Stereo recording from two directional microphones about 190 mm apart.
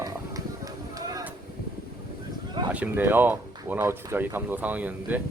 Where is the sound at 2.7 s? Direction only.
10° right (ahead or behind).